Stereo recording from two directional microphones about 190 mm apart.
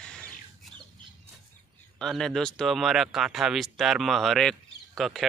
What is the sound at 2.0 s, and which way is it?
Speech, centre (ahead or behind).